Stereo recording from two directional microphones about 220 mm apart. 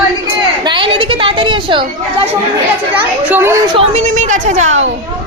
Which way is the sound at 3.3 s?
10° right (ahead or behind).